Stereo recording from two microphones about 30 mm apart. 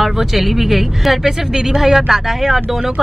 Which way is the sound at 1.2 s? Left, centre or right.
Right.